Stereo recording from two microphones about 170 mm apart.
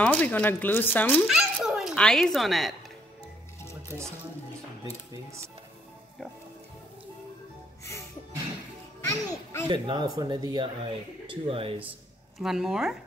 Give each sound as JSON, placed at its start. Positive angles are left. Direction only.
{"t": 0.0, "sound": "speech", "side_deg": 10}
{"t": 1.2, "sound": "speech", "side_deg": 0}
{"t": 9.0, "sound": "a child's voice", "side_deg": 15}
{"t": 9.7, "sound": "speech", "side_deg": -25}
{"t": 12.4, "sound": "speech", "side_deg": 0}